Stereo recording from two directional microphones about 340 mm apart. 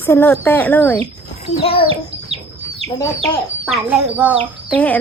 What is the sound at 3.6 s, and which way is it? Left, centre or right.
Speech, centre.